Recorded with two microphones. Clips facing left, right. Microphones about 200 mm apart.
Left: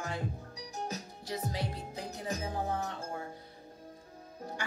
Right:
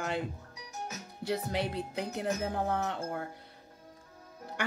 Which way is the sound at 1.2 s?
60° right (ahead or behind).